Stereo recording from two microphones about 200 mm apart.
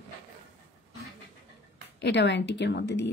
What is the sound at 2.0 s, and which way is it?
A woman's voice, 60° left (ahead or behind).